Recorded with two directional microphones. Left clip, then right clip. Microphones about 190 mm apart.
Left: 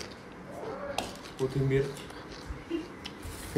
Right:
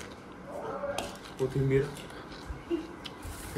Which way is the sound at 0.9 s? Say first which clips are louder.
Even; centre (ahead or behind).